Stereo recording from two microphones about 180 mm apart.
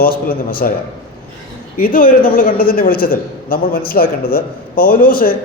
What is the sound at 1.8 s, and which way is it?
A man's voice, 50° left (ahead or behind).